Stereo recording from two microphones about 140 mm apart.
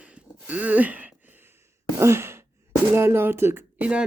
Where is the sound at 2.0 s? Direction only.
20° right (ahead or behind).